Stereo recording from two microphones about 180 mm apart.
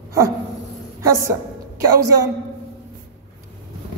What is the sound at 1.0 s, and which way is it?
A woman's voice, 15° right (ahead or behind).